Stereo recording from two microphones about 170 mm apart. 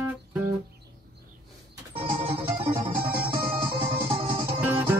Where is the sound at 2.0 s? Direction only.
30° right (ahead or behind).